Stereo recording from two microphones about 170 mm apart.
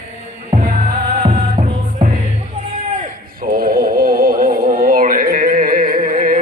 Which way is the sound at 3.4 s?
60° right (ahead or behind).